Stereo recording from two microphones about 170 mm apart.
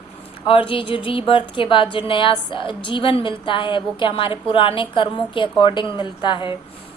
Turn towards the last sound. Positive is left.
turn(degrees=30)  # may be behind; listen again after turning